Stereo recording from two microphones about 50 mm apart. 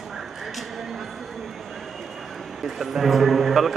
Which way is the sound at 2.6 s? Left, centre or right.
Centre.